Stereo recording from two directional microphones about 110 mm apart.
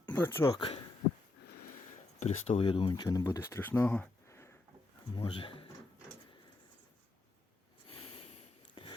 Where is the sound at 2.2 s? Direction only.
85° left.